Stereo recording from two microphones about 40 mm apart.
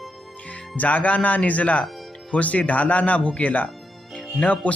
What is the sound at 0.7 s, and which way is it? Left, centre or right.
Speech, left.